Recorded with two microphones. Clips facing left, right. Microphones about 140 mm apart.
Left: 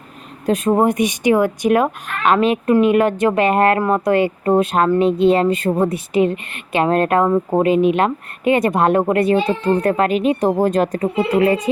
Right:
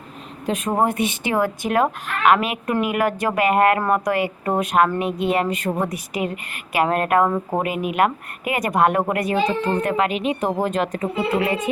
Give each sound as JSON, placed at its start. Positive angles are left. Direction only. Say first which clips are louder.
{"t": 0.4, "sound": "speech", "louder": "left 6 dB", "side_deg": 35}
{"t": 0.9, "sound": "a woman's voice", "louder": "left 7 dB", "side_deg": 15}